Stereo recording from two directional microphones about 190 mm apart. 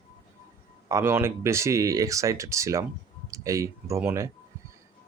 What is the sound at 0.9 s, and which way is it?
Speech, 15° right (ahead or behind).